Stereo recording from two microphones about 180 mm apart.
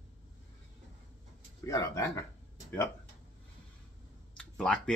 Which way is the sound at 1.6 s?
15° left (ahead or behind).